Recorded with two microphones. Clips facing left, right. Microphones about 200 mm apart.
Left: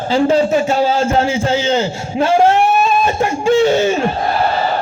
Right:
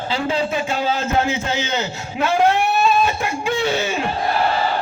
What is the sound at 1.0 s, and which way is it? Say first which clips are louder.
A man's voice: left 5 dB; 30° left (ahead or behind).